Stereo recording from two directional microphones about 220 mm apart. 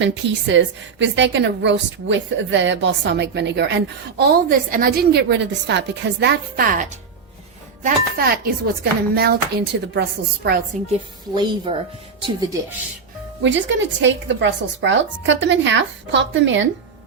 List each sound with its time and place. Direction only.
0.0 s a woman's voice: 55° right (ahead or behind); by 6.8 s 40° right (ahead or behind)
7.9 s speech: 45° right (ahead or behind)
11.3 s speech: 20° right (ahead or behind)
13.4 s a woman's voice: 55° right (ahead or behind)